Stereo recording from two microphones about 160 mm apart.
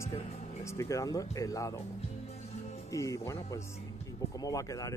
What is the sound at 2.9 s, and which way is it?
Speech, 20° left (ahead or behind).